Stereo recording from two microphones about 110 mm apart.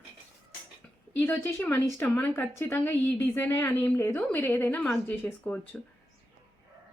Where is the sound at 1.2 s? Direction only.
20° left (ahead or behind).